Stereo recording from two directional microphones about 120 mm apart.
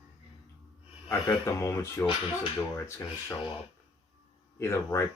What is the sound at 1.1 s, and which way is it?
Speech, 25° left (ahead or behind).